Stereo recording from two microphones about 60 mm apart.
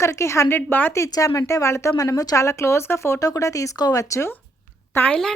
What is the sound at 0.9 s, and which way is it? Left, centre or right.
Speech, left.